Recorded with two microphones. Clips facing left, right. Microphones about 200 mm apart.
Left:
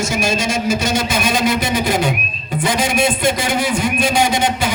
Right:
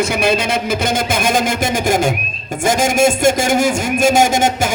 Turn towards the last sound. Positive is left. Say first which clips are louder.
# right 3 dB
turn(degrees=-45)  # may be behind; listen again after turning